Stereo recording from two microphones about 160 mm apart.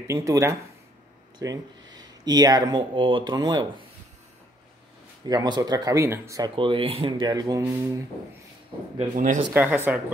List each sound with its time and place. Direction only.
0.0 s speech: 20° right (ahead or behind)
5.2 s speech: 25° right (ahead or behind)
6.5 s speech: 35° right (ahead or behind)
9.1 s speech: 55° right (ahead or behind)
9.5 s speech: 10° right (ahead or behind)